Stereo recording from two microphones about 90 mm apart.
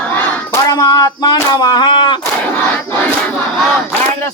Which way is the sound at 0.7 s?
45° left (ahead or behind).